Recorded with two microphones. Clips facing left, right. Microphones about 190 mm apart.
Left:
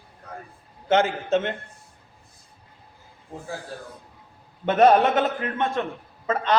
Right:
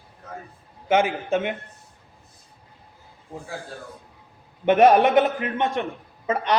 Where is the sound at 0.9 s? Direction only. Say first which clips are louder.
Even; 10° right (ahead or behind).